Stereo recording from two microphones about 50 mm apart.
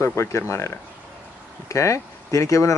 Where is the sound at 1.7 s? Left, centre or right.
Left.